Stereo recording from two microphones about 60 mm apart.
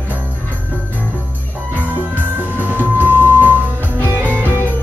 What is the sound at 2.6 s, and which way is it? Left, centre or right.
Music, right.